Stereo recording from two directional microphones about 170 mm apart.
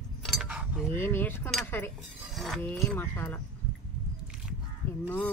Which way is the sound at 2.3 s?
Centre (ahead or behind).